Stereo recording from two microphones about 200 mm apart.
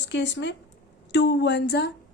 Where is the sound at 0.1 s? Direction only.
65° left (ahead or behind).